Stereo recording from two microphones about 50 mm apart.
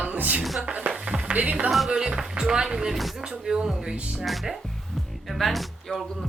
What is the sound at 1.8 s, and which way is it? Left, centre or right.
Speech, centre.